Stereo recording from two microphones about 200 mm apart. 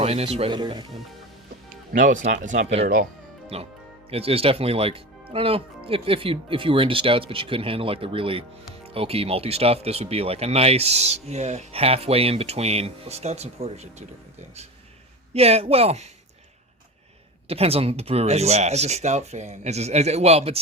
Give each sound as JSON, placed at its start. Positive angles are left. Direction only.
{"t": 0.0, "sound": "speech", "side_deg": -30}
{"t": 1.9, "sound": "speech", "side_deg": -40}
{"t": 15.3, "sound": "speech", "side_deg": -30}
{"t": 17.5, "sound": "speech", "side_deg": -30}